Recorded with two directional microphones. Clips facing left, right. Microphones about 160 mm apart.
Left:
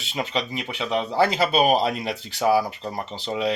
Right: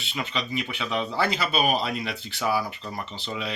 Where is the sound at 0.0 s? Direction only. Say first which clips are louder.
Left 4 dB; 40° left (ahead or behind).